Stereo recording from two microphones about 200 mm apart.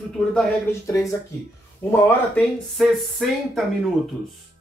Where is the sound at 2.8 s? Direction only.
Centre (ahead or behind).